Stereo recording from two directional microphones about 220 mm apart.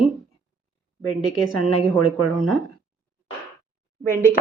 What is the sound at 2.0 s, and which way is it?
Speech, 75° left (ahead or behind).